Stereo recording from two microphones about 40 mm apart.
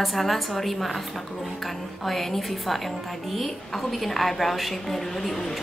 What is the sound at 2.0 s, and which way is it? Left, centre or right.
A woman's voice, centre.